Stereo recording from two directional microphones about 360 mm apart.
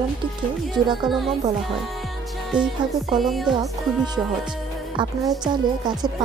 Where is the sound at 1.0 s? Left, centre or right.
Centre.